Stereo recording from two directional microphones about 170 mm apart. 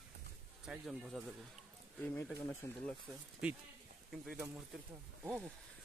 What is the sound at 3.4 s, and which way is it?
Speech, 5° right (ahead or behind).